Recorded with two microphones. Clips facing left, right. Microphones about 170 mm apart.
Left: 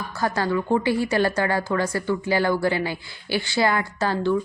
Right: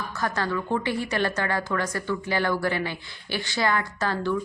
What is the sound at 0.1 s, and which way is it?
A woman's voice, 30° left (ahead or behind).